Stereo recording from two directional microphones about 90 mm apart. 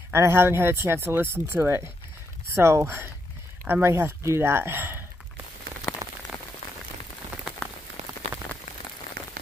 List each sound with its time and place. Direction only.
0.1 s speech: 30° right (ahead or behind)
5.9 s rain on surface: 20° left (ahead or behind)